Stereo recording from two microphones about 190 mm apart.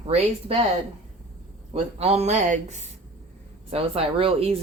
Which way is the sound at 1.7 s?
30° right (ahead or behind).